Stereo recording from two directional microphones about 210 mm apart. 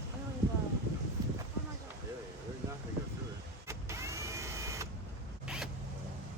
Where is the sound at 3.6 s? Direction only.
15° right (ahead or behind).